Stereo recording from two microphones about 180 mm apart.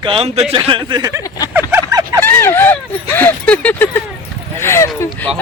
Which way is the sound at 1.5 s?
10° right (ahead or behind).